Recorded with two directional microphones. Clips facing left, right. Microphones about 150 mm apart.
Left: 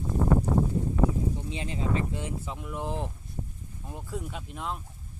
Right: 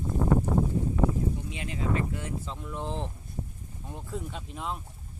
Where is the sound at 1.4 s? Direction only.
30° left (ahead or behind).